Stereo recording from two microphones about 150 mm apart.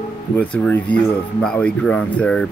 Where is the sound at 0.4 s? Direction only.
10° left (ahead or behind).